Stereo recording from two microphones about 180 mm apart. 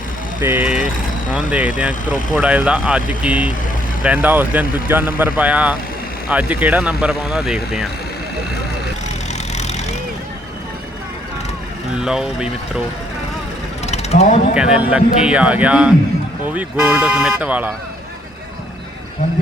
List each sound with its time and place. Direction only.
0.4 s speech: 10° right (ahead or behind)
9.6 s vehicle: 40° left (ahead or behind)
11.9 s speech: 5° right (ahead or behind)
13.8 s mechanisms: 35° left (ahead or behind)
14.5 s speech: 5° right (ahead or behind)